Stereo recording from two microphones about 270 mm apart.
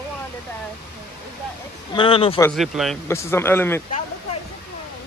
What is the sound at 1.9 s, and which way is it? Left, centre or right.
Speech, centre.